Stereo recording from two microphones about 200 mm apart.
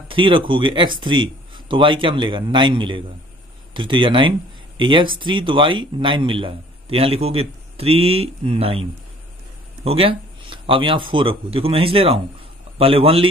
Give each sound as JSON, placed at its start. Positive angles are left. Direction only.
{"t": 0.1, "sound": "speech", "side_deg": -25}
{"t": 9.8, "sound": "speech", "side_deg": -25}